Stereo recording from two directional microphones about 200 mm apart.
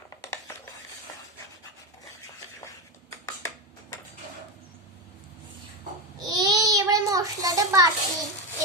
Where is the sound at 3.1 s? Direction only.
15° left (ahead or behind).